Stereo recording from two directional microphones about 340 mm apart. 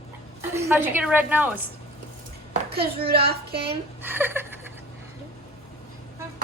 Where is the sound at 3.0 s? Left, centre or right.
Right.